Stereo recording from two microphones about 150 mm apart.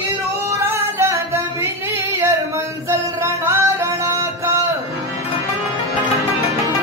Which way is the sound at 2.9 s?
20° right (ahead or behind).